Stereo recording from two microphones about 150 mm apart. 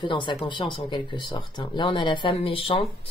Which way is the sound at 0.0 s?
30° left (ahead or behind).